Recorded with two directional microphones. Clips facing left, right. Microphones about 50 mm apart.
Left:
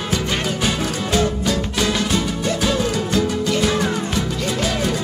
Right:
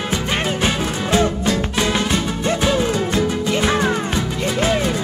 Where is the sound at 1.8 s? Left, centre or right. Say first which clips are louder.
Right 1 dB; right.